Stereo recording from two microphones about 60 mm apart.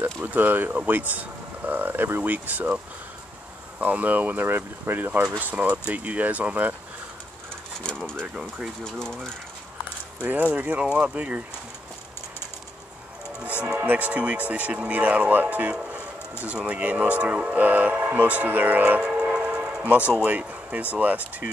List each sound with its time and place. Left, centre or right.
0.2 s speech: right
3.8 s speech: right
7.8 s speech: centre
10.2 s speech: right
13.7 s speech: right
18.3 s music: right
20.2 s a sound: right
20.9 s speech: right